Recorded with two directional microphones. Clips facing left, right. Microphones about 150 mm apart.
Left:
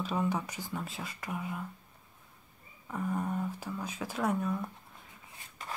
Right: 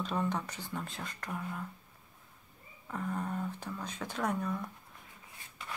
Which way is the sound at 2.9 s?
10° left (ahead or behind).